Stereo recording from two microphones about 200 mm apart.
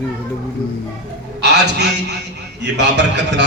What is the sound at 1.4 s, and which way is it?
A man's voice, 60° right (ahead or behind).